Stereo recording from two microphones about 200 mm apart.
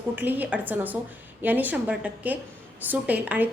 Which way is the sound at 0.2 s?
10° right (ahead or behind).